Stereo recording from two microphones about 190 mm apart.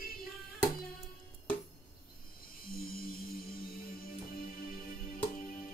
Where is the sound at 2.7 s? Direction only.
50° left (ahead or behind).